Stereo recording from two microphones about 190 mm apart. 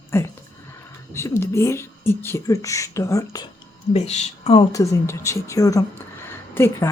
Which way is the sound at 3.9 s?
35° left (ahead or behind).